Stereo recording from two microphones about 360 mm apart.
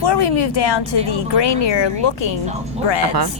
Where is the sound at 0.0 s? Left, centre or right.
Left.